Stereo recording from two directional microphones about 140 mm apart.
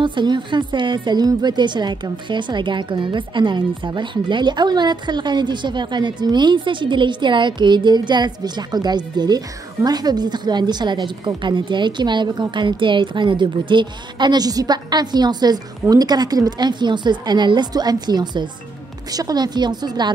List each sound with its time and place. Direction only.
0.0 s a woman's voice: 35° right (ahead or behind)